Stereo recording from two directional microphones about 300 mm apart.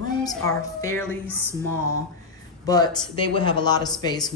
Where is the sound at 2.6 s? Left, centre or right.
Centre.